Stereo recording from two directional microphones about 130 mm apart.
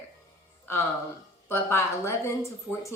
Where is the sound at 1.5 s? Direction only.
20° left (ahead or behind).